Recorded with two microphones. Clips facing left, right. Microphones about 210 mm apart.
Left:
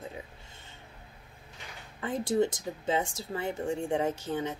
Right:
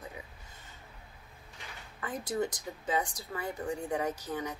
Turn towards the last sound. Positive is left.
turn(degrees=25)  # may be behind; listen again after turning